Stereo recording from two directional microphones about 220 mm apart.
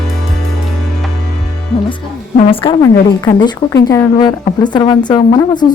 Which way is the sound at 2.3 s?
25° left (ahead or behind).